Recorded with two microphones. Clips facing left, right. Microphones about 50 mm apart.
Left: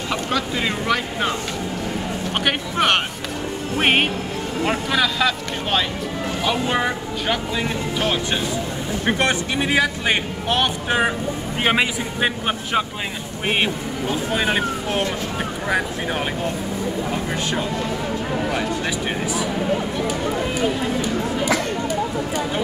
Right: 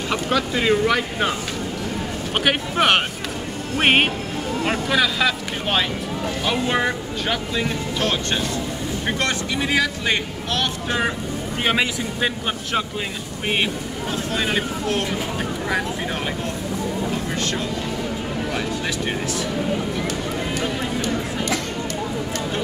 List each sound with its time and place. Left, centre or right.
0.1 s speech: centre
2.4 s speech: centre
9.0 s a man's voice: left
14.3 s a man's voice: centre